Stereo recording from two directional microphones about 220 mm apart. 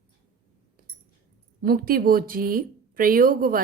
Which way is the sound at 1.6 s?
40° right (ahead or behind).